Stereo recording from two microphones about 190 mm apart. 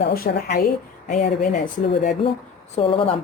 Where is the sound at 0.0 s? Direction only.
55° left (ahead or behind).